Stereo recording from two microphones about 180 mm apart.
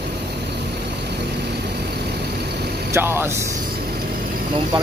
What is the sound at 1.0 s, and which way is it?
Vehicle, 65° right (ahead or behind).